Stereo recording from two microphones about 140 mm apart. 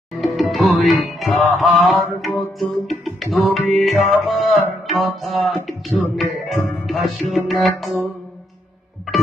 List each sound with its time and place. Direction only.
0.2 s music: centre (ahead or behind)